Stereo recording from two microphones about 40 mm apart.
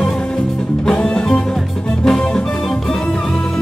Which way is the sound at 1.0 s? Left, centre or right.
Left.